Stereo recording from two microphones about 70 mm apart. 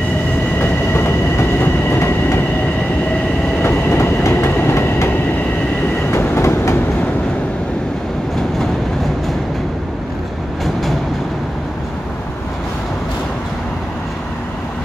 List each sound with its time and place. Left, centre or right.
0.6 s train: left
3.6 s train: left
10.6 s vehicle: centre